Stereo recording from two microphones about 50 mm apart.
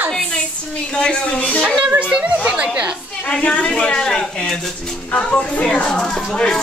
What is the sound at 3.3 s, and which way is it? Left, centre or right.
Speech, left.